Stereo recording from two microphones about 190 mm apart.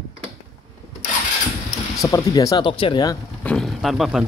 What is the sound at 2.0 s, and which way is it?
Speech, 15° left (ahead or behind).